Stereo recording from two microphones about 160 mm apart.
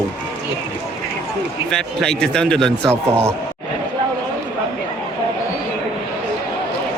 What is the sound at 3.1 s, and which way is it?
Speech, 15° right (ahead or behind).